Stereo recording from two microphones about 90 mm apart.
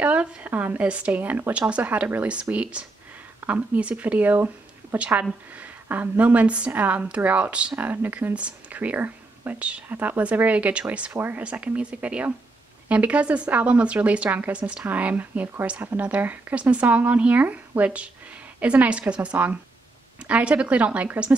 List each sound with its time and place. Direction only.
0.0 s a woman's voice: 15° right (ahead or behind)